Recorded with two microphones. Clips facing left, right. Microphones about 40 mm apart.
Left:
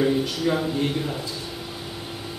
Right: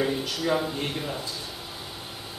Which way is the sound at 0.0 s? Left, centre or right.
Centre.